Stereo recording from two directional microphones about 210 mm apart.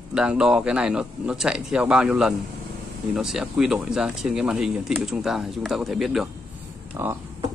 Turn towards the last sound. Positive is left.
turn(degrees=-10)  # may be behind; listen again after turning